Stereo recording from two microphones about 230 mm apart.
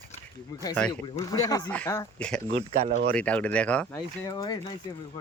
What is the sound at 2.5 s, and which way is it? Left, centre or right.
Speech, right.